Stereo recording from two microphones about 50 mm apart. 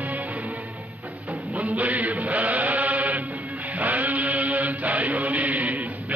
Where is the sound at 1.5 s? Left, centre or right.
Right.